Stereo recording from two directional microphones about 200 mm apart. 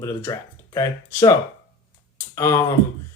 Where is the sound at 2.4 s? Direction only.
15° left (ahead or behind).